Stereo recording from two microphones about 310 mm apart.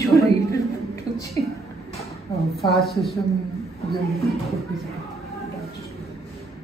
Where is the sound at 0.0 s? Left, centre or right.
Centre.